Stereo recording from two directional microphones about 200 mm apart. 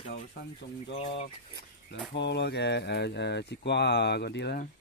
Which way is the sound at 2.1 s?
60° left (ahead or behind).